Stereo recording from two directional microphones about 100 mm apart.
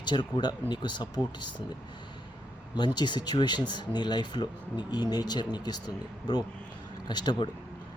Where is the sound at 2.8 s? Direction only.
45° left (ahead or behind).